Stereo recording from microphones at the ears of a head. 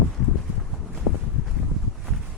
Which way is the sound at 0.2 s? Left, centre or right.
Left.